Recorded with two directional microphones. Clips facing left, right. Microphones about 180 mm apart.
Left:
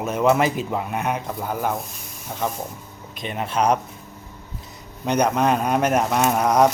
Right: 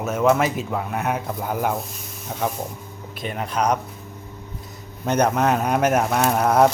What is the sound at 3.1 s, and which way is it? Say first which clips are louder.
Speech: left 1 dB; 20° left (ahead or behind).